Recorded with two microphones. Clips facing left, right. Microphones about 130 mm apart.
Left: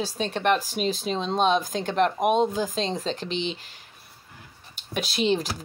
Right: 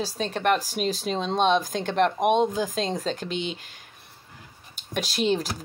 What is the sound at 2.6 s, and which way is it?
Speech, 45° right (ahead or behind).